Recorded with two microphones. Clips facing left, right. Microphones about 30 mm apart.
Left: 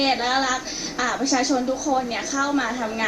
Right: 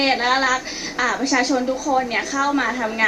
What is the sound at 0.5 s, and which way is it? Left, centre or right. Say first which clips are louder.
Speech: right 4 dB; right.